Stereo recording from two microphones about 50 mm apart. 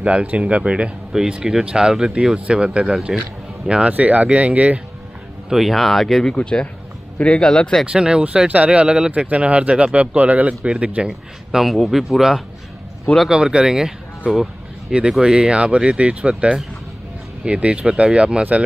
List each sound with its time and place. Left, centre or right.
0.0 s a man's voice: right
3.1 s speech: centre
3.6 s a man's voice: centre
3.9 s a man's voice: right
5.5 s speech: centre
6.3 s speech: left
7.8 s a man's voice: centre
9.1 s a man's voice: right
11.6 s a man's voice: centre; by 18.6 s right